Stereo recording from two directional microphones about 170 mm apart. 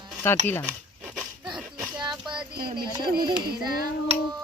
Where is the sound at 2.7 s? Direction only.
25° right (ahead or behind).